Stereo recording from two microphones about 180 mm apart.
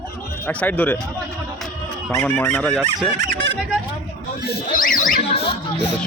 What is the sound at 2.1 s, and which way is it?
Speech, 10° left (ahead or behind).